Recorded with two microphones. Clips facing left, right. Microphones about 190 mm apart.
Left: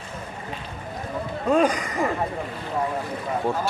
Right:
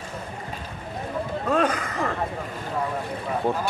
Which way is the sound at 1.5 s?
10° left (ahead or behind).